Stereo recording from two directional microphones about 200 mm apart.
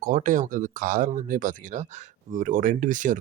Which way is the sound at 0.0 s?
40° right (ahead or behind).